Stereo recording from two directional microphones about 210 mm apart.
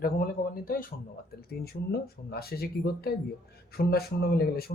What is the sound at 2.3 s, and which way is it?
Speech, 45° left (ahead or behind).